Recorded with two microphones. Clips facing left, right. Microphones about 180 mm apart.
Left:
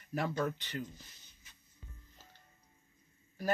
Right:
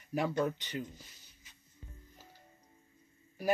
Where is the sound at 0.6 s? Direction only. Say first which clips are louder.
Right 1 dB; 15° right (ahead or behind).